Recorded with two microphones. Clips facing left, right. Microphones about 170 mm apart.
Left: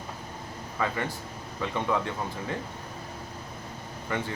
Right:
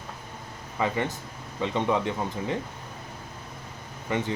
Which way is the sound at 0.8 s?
20° right (ahead or behind).